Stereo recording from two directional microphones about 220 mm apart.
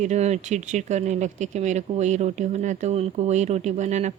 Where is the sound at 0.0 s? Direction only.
30° right (ahead or behind).